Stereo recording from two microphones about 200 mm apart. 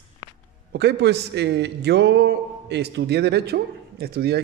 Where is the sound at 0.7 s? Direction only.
55° right (ahead or behind).